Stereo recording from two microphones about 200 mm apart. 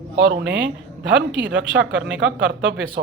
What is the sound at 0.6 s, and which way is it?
Speech, 65° right (ahead or behind).